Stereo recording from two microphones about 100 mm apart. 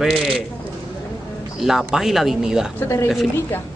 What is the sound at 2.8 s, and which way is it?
Speech, 30° left (ahead or behind).